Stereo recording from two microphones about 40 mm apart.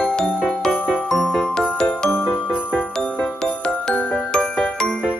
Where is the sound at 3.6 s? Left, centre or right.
Left.